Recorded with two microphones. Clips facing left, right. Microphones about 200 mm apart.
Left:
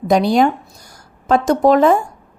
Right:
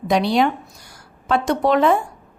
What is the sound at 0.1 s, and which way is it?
Speech, 45° left (ahead or behind).